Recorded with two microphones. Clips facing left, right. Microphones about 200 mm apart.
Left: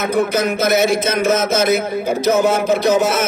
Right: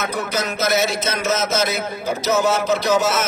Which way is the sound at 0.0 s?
55° left (ahead or behind).